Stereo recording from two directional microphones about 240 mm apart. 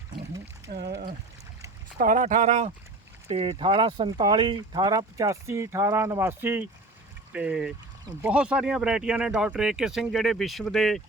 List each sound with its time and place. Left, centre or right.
0.7 s speech: right; by 11.0 s centre